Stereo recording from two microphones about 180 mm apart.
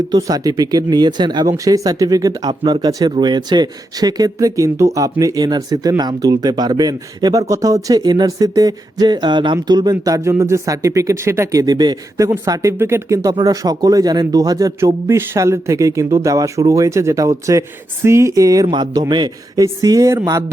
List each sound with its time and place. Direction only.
0.1 s speech: 20° right (ahead or behind)